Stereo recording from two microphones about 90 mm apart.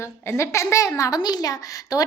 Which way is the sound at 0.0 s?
30° left (ahead or behind).